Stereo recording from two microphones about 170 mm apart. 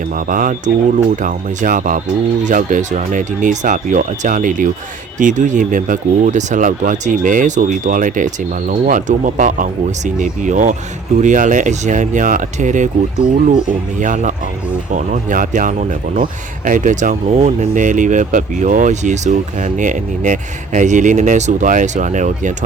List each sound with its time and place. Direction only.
0.2 s speech: 50° right (ahead or behind)